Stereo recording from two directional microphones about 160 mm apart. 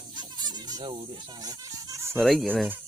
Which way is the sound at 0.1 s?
25° right (ahead or behind).